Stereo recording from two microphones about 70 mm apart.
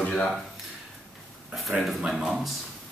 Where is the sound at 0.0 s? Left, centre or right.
Centre.